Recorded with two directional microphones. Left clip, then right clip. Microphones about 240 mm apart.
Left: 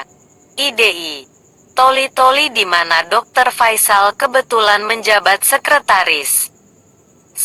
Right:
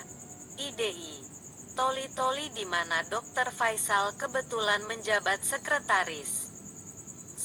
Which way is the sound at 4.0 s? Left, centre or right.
Left.